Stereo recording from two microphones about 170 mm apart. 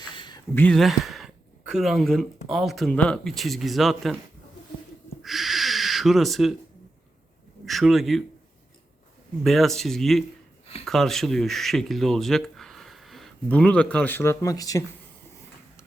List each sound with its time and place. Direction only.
0.1 s a sound: 25° left (ahead or behind)
0.5 s speech: 10° left (ahead or behind)
0.8 s speech: centre (ahead or behind)
5.2 s owl: centre (ahead or behind)
7.6 s speech: centre (ahead or behind)
9.4 s speech: centre (ahead or behind); by 14.8 s 20° left (ahead or behind)